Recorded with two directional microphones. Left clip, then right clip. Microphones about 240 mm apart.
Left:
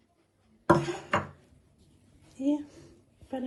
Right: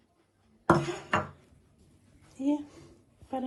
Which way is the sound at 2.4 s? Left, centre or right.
Centre.